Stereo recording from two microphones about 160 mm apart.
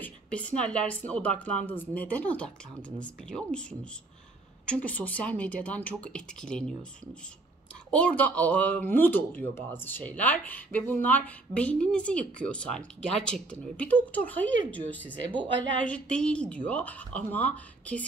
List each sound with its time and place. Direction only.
0.0 s a woman's voice: 10° left (ahead or behind)
4.6 s a woman's voice: 10° left (ahead or behind)
7.9 s a woman's voice: 10° left (ahead or behind)
15.1 s a woman's voice: 30° right (ahead or behind)
15.8 s a woman's voice: 5° left (ahead or behind)